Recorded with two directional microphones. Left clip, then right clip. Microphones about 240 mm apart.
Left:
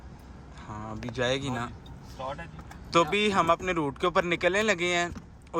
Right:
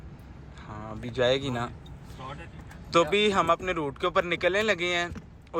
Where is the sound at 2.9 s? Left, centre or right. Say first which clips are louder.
Right 1 dB; centre.